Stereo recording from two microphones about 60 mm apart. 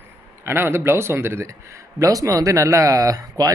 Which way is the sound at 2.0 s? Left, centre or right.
Right.